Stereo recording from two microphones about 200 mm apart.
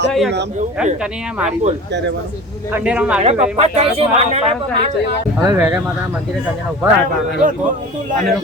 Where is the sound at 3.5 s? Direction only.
30° right (ahead or behind).